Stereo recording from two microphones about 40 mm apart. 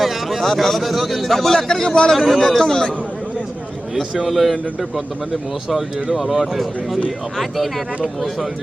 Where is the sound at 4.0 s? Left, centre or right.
Centre.